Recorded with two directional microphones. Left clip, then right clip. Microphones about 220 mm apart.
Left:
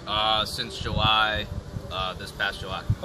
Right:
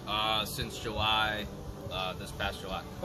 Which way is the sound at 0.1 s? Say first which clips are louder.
Left 7 dB; centre (ahead or behind).